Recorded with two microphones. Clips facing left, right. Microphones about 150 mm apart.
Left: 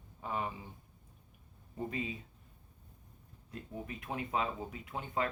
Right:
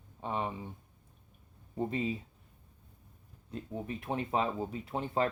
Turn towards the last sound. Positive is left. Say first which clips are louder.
# right 5 dB
turn(degrees=-30)  # may be behind; listen again after turning